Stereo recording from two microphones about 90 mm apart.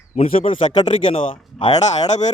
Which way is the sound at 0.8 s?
75° left (ahead or behind).